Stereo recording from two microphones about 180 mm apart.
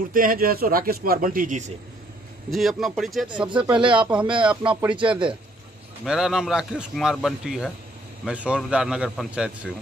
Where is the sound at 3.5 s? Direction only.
25° right (ahead or behind).